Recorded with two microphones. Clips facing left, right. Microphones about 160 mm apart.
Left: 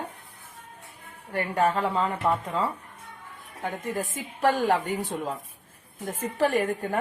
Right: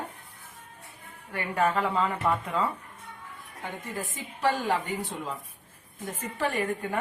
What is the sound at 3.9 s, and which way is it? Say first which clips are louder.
A woman's voice: left 4 dB; 50° left (ahead or behind).